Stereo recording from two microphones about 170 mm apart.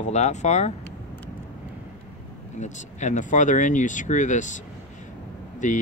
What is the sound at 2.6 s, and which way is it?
Speech, 45° left (ahead or behind).